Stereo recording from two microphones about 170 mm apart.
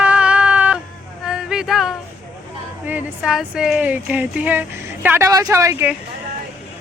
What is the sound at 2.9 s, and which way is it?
Speech, 5° right (ahead or behind).